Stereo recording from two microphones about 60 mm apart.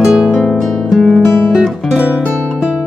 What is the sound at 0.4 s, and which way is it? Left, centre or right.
Music, centre.